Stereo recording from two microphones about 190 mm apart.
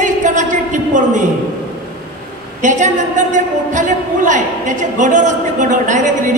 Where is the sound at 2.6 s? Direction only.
40° right (ahead or behind).